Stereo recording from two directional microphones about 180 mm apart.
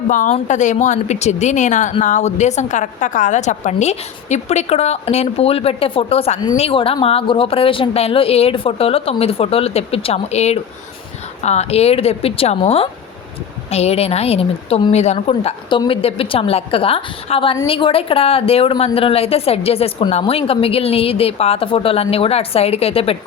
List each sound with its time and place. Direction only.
0.1 s a woman's voice: 45° left (ahead or behind)